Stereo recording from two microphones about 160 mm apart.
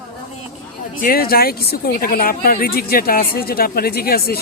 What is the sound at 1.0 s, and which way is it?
A woman's voice, 65° left (ahead or behind).